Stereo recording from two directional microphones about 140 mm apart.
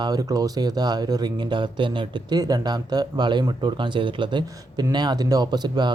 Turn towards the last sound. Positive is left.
turn(degrees=-30)  # may be behind; listen again after turning